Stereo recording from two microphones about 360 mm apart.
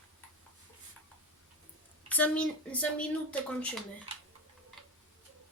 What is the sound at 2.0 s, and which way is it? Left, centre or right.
Speech, centre.